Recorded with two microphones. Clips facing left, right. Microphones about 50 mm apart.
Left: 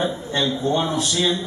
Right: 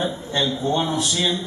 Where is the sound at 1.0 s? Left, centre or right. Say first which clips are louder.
Left 1 dB; centre.